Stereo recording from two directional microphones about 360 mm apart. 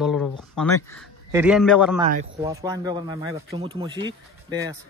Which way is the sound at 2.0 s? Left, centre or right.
Centre.